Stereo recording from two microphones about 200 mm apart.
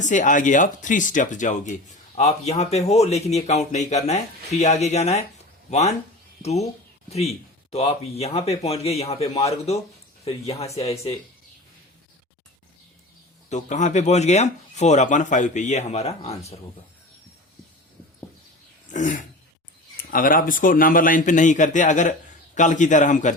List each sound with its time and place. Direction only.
0.0 s speech: 40° left (ahead or behind)
7.7 s speech: 30° left (ahead or behind)
13.5 s speech: 35° left (ahead or behind)
18.9 s throat clearing: 40° left (ahead or behind)
20.1 s speech: 45° left (ahead or behind)